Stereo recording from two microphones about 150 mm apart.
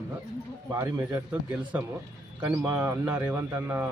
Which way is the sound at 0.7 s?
20° right (ahead or behind).